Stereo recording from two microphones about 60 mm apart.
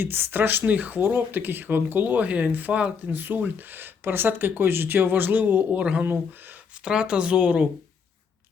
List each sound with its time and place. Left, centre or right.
0.0 s speech: right
6.8 s speech: centre